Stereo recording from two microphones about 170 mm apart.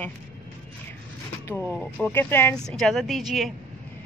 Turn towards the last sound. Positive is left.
turn(degrees=0)  # may be behind; listen again after turning